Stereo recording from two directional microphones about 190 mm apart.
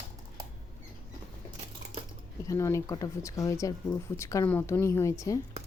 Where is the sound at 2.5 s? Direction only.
15° left (ahead or behind).